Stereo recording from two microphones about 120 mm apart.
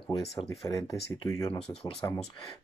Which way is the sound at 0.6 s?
30° left (ahead or behind).